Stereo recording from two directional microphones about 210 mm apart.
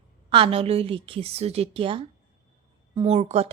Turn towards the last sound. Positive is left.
turn(degrees=-30)  # may be behind; listen again after turning